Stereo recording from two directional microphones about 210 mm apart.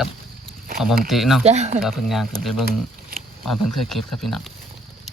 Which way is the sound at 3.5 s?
Centre (ahead or behind).